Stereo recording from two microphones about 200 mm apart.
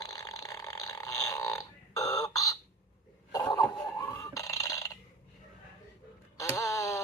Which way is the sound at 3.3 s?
20° left (ahead or behind).